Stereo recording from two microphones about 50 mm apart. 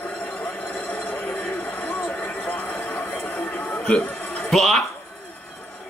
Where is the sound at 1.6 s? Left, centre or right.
Left.